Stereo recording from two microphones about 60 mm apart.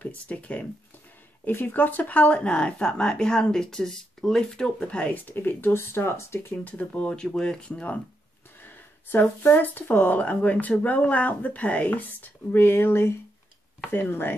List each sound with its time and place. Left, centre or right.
0.0 s speech: left
1.4 s speech: left
5.3 s speech: left
6.5 s speech: left
8.6 s speech: left
12.5 s speech: left